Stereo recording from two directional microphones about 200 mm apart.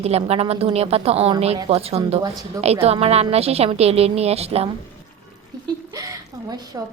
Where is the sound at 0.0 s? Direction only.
30° right (ahead or behind).